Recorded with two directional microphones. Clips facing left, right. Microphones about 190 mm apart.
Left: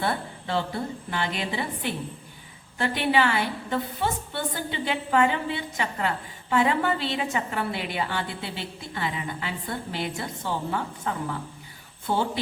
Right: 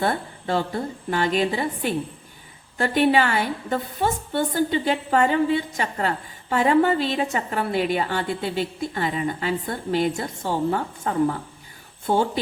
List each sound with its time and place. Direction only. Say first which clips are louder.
0.0 s a woman's voice: right 4 dB; 45° right (ahead or behind)